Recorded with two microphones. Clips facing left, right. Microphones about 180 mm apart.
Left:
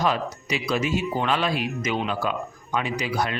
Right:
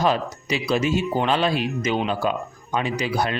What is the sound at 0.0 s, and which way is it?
A man's voice, 30° right (ahead or behind).